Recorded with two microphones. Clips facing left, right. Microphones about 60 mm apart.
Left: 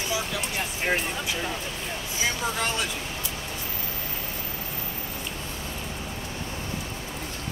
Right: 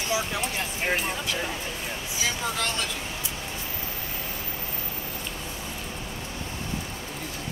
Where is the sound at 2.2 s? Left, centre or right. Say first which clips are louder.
Left 1 dB; centre.